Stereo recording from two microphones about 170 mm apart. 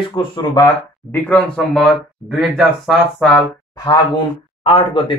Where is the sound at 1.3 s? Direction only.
Centre (ahead or behind).